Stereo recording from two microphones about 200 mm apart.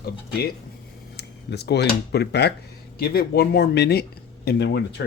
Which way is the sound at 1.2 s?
55° left (ahead or behind).